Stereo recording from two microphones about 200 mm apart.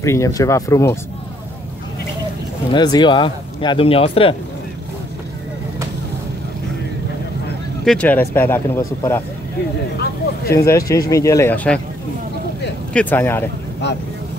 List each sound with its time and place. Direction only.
0.0 s speech: 15° left (ahead or behind)
2.7 s speech: 20° left (ahead or behind)
7.8 s speech: 5° left (ahead or behind)
10.5 s speech: 15° left (ahead or behind)
12.9 s speech: 10° left (ahead or behind)